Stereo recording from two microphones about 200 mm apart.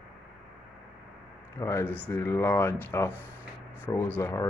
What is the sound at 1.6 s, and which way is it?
Speech, 15° left (ahead or behind).